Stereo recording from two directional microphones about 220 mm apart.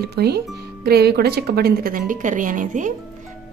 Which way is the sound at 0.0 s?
45° right (ahead or behind).